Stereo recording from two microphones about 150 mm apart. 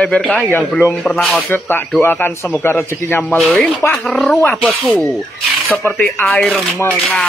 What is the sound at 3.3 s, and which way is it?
A man's voice, centre (ahead or behind).